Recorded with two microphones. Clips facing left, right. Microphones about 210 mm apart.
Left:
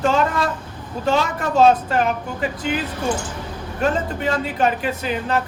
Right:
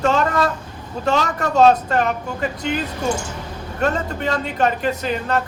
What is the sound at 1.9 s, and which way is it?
Speech, 5° left (ahead or behind).